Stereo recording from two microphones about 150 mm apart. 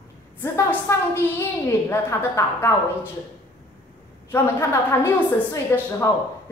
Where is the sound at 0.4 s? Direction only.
15° left (ahead or behind).